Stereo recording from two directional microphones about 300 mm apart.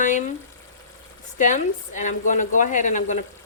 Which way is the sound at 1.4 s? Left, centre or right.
Left.